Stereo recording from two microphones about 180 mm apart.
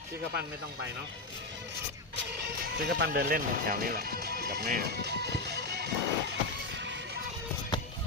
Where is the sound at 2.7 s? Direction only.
60° right (ahead or behind).